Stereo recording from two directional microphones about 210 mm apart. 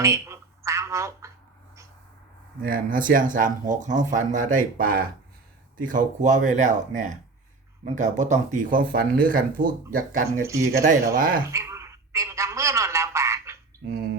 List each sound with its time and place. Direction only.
0.0 s telephone: 15° right (ahead or behind)
2.6 s speech: 40° right (ahead or behind)
10.4 s speech: 15° right (ahead or behind)
10.7 s speech: 40° right (ahead or behind)
11.5 s telephone: 15° right (ahead or behind)